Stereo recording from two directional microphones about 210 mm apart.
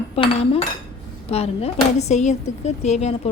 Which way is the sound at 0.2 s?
30° left (ahead or behind).